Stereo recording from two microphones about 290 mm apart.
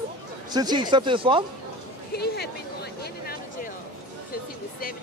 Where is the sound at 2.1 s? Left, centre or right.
Left.